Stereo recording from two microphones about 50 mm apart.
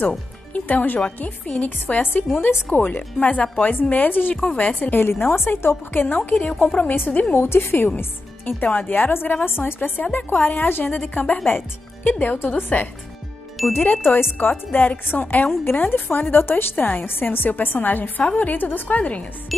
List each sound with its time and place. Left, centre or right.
0.5 s a woman's voice: left
5.9 s speech: left
7.3 s a woman's voice: left
13.6 s speech: centre
14.4 s speech: left
17.0 s speech: left